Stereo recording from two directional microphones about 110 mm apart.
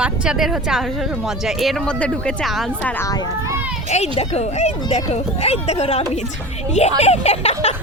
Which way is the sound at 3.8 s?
90° left.